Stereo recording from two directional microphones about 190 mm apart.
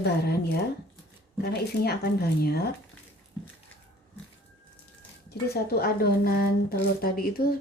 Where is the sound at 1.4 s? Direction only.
55° left (ahead or behind).